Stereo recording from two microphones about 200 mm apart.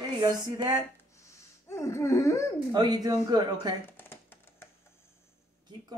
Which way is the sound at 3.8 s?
10° left (ahead or behind).